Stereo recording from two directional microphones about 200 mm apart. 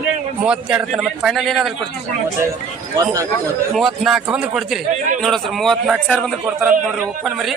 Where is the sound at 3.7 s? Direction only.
Centre (ahead or behind).